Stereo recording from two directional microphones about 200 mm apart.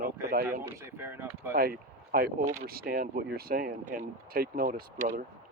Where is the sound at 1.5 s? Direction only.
50° right (ahead or behind).